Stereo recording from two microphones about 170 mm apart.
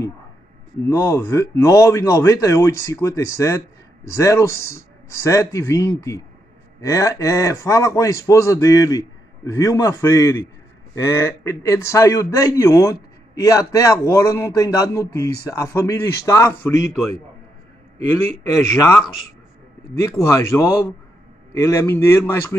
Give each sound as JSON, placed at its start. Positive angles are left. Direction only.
{"t": 0.8, "sound": "a man's voice", "side_deg": 20}
{"t": 18.8, "sound": "speech", "side_deg": 15}